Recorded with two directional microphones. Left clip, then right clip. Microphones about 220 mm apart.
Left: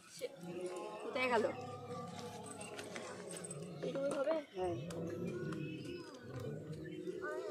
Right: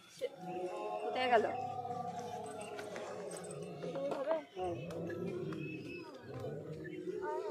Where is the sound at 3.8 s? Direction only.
45° left (ahead or behind).